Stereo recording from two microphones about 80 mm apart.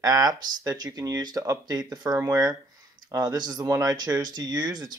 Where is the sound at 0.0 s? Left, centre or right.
Right.